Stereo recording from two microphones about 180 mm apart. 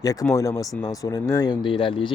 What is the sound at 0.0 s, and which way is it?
Speech, 20° left (ahead or behind).